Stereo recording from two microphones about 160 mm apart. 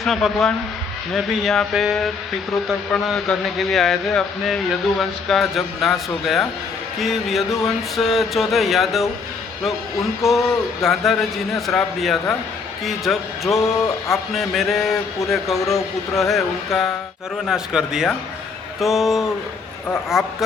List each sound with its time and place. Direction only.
0.0 s speech: centre (ahead or behind)
13.6 s speech: 20° left (ahead or behind)
14.3 s speech: centre (ahead or behind)